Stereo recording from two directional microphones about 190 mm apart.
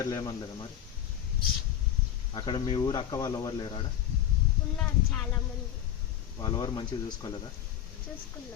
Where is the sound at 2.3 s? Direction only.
25° left (ahead or behind).